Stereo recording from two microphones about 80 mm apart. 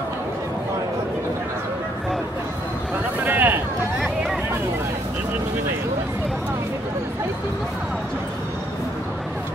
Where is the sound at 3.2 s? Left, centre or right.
Right.